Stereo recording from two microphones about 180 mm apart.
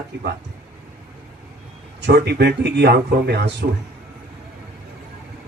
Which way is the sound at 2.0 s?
65° right (ahead or behind).